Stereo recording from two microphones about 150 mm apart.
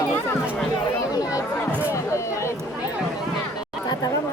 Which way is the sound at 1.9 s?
20° left (ahead or behind).